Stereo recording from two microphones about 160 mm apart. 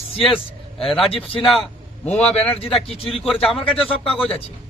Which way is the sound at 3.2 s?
Centre (ahead or behind).